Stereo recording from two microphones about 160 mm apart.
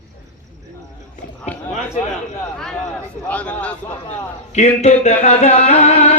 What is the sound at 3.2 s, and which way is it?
Speech, 10° left (ahead or behind).